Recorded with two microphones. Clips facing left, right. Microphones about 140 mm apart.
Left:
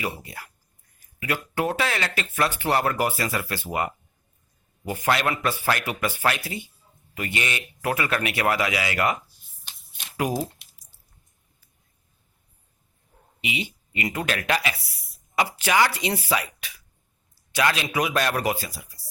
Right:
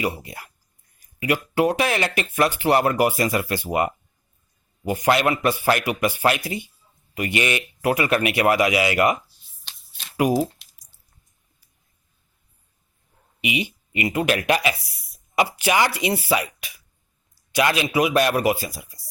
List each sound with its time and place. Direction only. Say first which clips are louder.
0.0 s speech: right 5 dB; 15° right (ahead or behind)
10.2 s speech: right 6 dB; 10° right (ahead or behind)
13.4 s speech: right 5 dB; 15° right (ahead or behind)
17.3 s a sound: right 3 dB; 15° right (ahead or behind)
17.8 s speech: right 5 dB; 10° right (ahead or behind)